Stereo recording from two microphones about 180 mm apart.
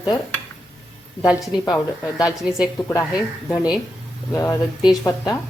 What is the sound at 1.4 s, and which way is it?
Speech, 20° left (ahead or behind).